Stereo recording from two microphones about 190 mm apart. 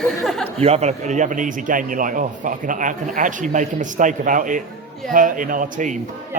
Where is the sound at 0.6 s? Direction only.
35° right (ahead or behind).